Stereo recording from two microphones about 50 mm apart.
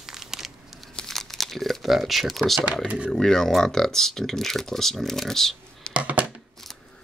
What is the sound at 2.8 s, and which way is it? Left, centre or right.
Speech, right.